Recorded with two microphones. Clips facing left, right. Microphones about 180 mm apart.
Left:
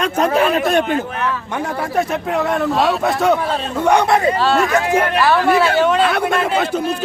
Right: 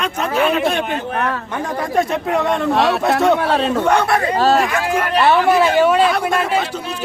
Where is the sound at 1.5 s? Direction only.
10° left (ahead or behind).